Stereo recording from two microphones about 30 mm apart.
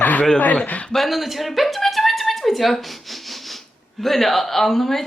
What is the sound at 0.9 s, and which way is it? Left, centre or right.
Speech, centre.